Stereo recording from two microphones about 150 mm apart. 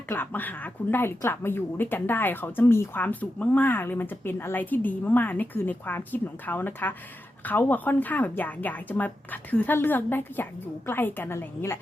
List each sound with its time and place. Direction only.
0.1 s a woman's voice: 10° left (ahead or behind)